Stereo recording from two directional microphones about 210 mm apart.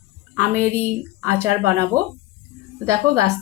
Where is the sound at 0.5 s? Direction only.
10° right (ahead or behind).